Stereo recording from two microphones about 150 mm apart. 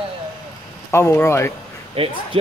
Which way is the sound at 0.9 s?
15° left (ahead or behind).